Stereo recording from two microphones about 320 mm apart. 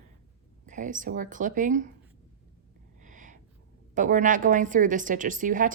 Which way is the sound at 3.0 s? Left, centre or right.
Right.